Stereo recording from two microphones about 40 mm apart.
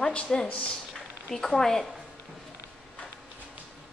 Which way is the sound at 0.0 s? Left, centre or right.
Left.